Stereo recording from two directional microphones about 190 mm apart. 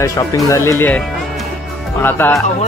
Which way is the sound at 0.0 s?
15° left (ahead or behind).